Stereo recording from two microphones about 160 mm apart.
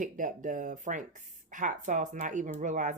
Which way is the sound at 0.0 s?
55° right (ahead or behind).